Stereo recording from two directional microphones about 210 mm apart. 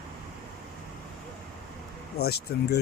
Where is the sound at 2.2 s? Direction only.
50° left (ahead or behind).